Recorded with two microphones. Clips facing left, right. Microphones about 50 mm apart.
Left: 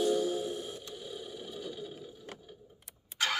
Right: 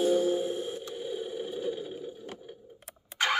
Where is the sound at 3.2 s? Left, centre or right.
Right.